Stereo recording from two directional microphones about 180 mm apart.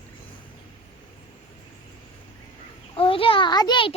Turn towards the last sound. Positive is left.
turn(degrees=25)  # may be behind; listen again after turning